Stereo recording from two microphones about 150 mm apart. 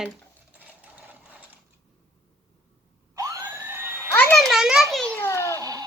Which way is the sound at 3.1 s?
20° right (ahead or behind).